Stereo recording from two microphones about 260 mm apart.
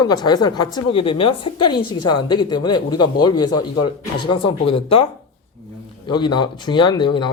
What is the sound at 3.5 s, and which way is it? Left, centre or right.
Speech, left.